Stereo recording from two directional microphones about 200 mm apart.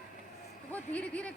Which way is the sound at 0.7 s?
5° left (ahead or behind).